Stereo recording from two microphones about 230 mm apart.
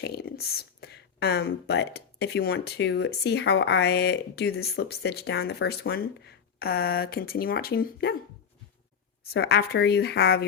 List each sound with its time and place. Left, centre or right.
0.0 s speech: left
9.3 s speech: left